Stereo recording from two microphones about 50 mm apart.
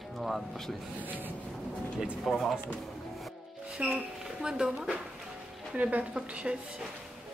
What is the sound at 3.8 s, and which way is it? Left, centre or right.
Speech, right.